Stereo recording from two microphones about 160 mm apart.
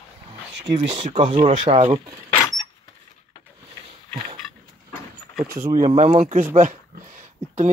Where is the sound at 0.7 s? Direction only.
50° right (ahead or behind).